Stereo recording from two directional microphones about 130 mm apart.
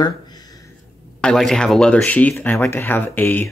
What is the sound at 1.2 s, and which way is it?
Speech, 5° left (ahead or behind).